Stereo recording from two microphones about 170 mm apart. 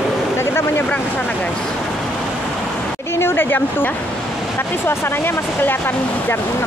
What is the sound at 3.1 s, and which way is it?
Speech, 15° left (ahead or behind).